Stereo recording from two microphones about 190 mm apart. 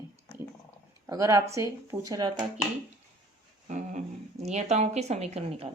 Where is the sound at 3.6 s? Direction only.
40° right (ahead or behind).